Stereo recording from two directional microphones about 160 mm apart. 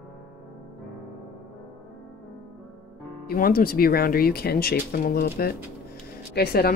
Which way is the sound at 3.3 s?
65° left (ahead or behind).